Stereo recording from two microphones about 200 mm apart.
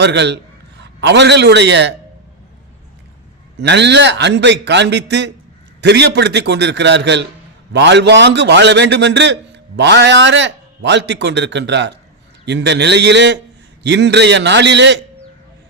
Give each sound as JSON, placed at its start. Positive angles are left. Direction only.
{"t": 0.0, "sound": "a man's voice", "side_deg": -60}
{"t": 3.6, "sound": "a man's voice", "side_deg": -60}